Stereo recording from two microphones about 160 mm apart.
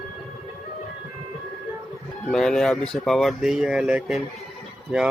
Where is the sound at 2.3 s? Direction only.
5° left (ahead or behind).